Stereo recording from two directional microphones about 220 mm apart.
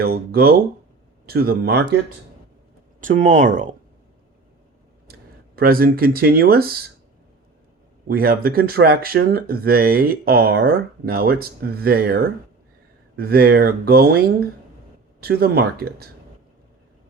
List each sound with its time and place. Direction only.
0.0 s speech: 45° right (ahead or behind)
3.0 s speech: 35° right (ahead or behind)
5.5 s speech: 40° right (ahead or behind)
8.0 s speech: 40° right (ahead or behind)